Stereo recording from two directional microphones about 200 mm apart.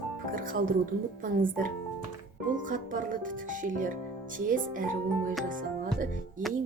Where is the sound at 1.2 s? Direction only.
45° right (ahead or behind).